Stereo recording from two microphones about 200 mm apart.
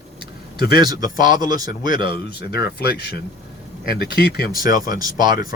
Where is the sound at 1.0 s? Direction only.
40° left (ahead or behind).